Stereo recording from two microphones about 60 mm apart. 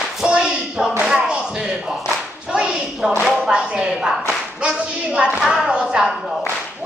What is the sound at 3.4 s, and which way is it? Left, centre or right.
A woman's voice, centre.